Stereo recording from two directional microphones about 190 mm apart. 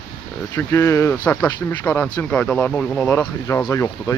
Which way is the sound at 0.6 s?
15° left (ahead or behind).